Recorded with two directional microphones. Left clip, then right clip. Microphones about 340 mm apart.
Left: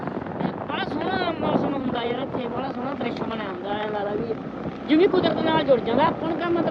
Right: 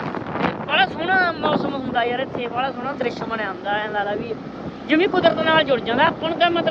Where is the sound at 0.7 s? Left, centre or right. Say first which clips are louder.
Right 10 dB; centre.